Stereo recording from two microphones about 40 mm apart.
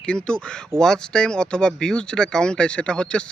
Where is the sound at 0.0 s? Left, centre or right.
Left.